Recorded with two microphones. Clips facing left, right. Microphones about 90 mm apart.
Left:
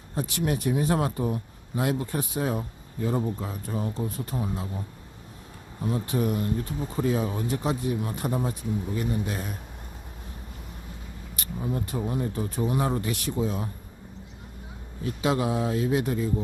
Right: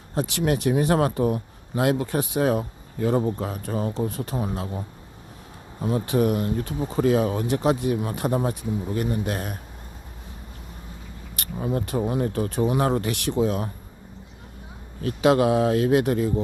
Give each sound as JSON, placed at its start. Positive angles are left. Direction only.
{"t": 0.1, "sound": "speech", "side_deg": -75}
{"t": 5.8, "sound": "speech", "side_deg": -85}
{"t": 11.3, "sound": "speech", "side_deg": -80}
{"t": 15.0, "sound": "speech", "side_deg": -70}